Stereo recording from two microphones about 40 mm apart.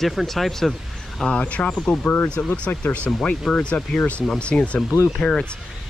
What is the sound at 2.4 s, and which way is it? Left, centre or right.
Speech, left.